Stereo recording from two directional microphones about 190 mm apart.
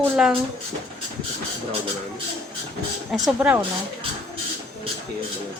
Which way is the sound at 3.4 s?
10° right (ahead or behind).